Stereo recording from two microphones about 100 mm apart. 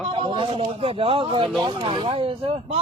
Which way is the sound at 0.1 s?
55° right (ahead or behind).